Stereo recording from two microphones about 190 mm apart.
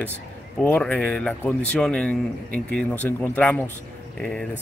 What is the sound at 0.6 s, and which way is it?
Speech, 5° left (ahead or behind).